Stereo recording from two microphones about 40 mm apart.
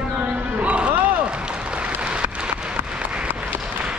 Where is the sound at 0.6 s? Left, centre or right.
Right.